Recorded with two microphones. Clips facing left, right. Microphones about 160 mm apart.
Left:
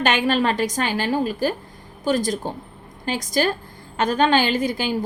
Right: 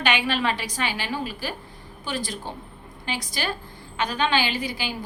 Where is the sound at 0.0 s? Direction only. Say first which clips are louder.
Left 5 dB; 45° left (ahead or behind).